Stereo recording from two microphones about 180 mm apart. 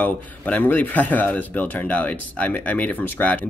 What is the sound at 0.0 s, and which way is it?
Speech, 10° left (ahead or behind).